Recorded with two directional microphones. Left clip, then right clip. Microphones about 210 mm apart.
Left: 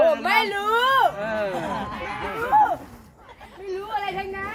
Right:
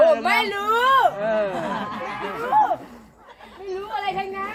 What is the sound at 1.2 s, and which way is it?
Speech, 50° left (ahead or behind).